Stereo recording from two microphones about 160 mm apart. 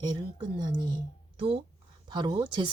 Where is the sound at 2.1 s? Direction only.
25° right (ahead or behind).